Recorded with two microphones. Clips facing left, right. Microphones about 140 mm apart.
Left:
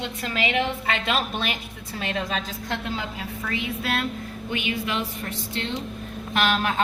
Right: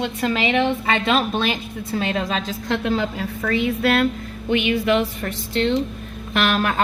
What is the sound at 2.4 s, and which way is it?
A woman's voice, 85° right.